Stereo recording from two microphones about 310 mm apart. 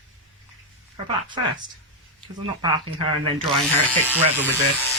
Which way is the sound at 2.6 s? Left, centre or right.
Centre.